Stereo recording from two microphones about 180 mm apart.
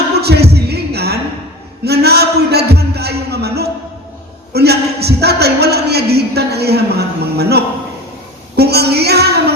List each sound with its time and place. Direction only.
0.2 s a sound: 65° right (ahead or behind)
4.5 s a man's voice: 65° right (ahead or behind)
8.5 s music: 65° right (ahead or behind)